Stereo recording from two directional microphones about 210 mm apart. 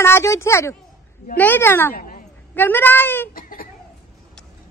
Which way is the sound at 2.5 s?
10° left (ahead or behind).